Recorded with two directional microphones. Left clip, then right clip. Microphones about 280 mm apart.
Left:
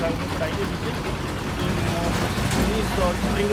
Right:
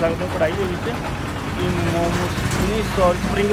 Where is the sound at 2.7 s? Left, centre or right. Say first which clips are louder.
Right 5 dB; centre.